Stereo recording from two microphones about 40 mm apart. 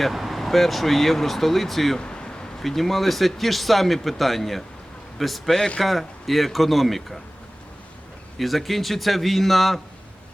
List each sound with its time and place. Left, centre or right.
0.0 s speech: centre
2.0 s a sound: left
2.6 s speech: centre
8.4 s speech: centre